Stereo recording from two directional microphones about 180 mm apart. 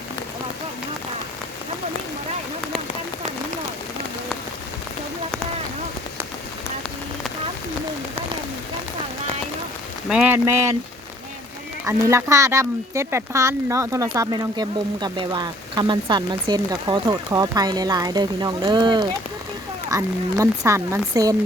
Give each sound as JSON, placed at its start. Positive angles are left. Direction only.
{"t": 10.1, "sound": "speech", "side_deg": -5}
{"t": 11.9, "sound": "speech", "side_deg": -15}